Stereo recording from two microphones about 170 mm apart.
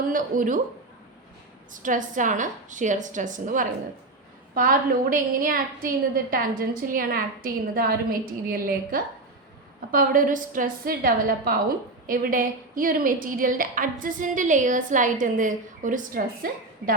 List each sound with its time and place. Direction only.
0.1 s a woman's voice: 50° right (ahead or behind)
1.7 s a woman's voice: 50° right (ahead or behind)